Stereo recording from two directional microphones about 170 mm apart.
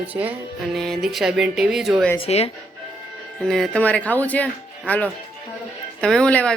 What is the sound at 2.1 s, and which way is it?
Speech, 35° left (ahead or behind).